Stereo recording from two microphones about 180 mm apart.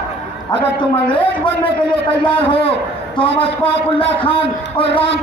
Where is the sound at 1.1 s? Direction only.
10° left (ahead or behind).